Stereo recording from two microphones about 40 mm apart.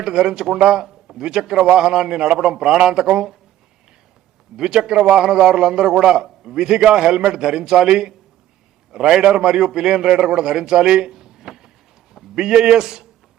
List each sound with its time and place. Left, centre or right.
0.0 s a man's voice: centre
4.5 s a man's voice: centre